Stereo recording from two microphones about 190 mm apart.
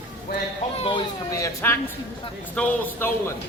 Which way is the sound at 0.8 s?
25° left (ahead or behind).